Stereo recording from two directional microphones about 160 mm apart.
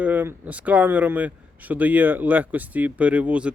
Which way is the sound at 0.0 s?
10° right (ahead or behind).